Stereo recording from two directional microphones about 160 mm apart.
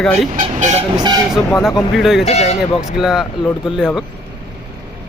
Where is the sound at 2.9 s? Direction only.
5° right (ahead or behind).